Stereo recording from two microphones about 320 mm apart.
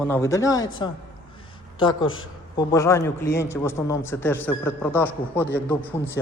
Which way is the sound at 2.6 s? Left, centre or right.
Centre.